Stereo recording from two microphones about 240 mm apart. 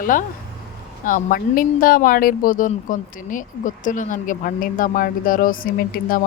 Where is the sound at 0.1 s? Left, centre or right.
Left.